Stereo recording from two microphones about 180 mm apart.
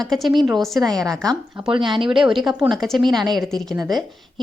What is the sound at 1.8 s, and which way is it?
Speech, 30° right (ahead or behind).